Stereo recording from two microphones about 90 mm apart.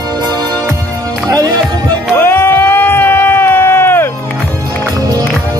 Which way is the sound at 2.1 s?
25° left (ahead or behind).